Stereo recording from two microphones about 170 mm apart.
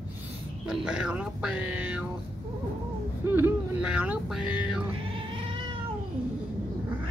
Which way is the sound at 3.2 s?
10° right (ahead or behind).